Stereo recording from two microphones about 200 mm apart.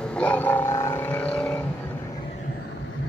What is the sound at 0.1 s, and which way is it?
Vehicle, 5° left (ahead or behind).